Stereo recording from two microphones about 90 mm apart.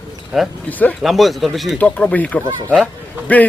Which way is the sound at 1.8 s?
15° left (ahead or behind).